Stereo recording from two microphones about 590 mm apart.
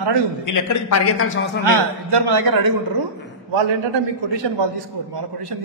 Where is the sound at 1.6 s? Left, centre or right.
Right.